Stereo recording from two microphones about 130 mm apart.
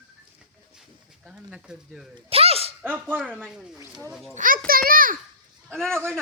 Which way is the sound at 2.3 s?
50° right (ahead or behind).